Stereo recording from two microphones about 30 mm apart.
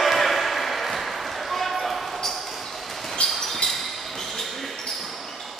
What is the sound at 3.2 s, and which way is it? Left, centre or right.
Basketball bounce, left.